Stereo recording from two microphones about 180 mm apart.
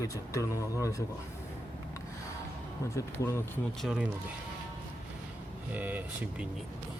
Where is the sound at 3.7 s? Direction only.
Centre (ahead or behind).